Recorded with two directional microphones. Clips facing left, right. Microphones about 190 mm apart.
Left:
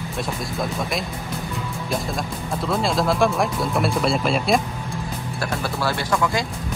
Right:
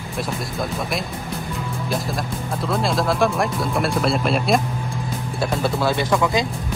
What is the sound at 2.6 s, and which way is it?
Speech, centre (ahead or behind).